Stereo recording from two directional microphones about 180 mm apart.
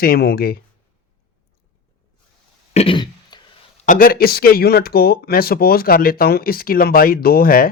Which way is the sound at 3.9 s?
50° left (ahead or behind).